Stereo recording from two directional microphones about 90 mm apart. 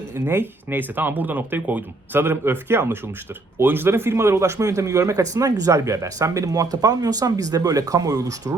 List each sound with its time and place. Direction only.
0.1 s speech: 25° right (ahead or behind)